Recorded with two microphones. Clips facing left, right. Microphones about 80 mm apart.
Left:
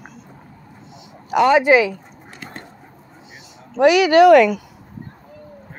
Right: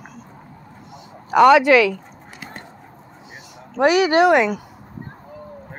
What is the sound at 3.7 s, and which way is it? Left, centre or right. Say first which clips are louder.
Speech: left 3 dB; right.